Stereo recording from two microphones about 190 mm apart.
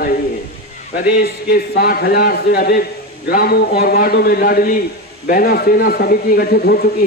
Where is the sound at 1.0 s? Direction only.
55° left (ahead or behind).